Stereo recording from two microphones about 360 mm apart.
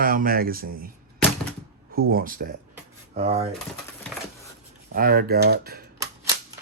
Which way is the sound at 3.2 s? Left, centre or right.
Centre.